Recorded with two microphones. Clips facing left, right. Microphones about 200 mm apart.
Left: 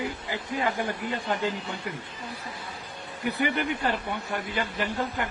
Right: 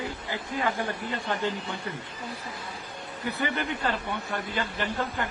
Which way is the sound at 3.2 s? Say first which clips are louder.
Left 3 dB; 15° left (ahead or behind).